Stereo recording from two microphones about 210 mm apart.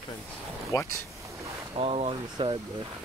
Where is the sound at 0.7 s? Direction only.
20° left (ahead or behind).